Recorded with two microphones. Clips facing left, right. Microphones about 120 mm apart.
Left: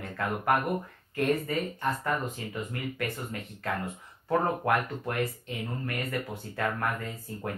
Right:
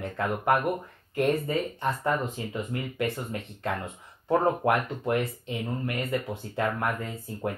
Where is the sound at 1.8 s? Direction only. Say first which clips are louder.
Right 3 dB; 25° right (ahead or behind).